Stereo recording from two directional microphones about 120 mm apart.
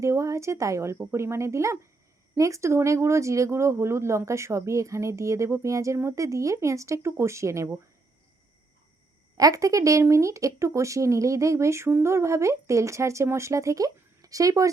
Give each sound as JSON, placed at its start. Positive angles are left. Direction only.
{"t": 0.0, "sound": "speech", "side_deg": -25}
{"t": 9.4, "sound": "speech", "side_deg": -30}